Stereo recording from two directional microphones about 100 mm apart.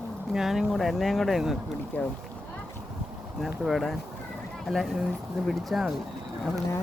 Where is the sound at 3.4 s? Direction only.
Centre (ahead or behind).